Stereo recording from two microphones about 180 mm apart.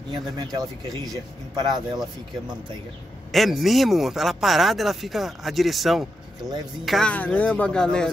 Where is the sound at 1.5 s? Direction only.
25° right (ahead or behind).